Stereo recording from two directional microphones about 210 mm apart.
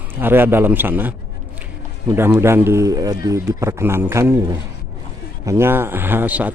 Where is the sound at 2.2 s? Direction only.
10° right (ahead or behind).